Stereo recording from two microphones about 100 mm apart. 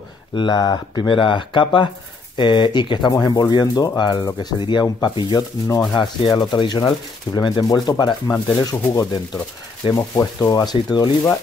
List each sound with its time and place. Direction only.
0.4 s speech: 50° left (ahead or behind)
7.6 s sanding: 40° left (ahead or behind)